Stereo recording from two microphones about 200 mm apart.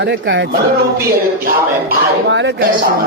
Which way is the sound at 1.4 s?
55° right (ahead or behind).